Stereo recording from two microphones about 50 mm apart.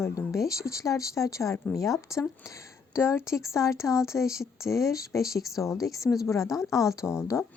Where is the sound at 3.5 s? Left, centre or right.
Left.